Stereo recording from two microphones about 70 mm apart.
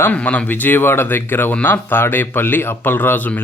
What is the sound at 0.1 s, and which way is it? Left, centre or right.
Speech, centre.